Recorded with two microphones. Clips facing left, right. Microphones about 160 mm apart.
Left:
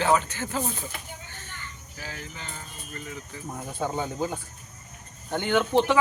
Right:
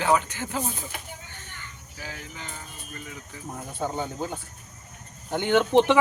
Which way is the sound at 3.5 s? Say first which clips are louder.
Even; 5° left (ahead or behind).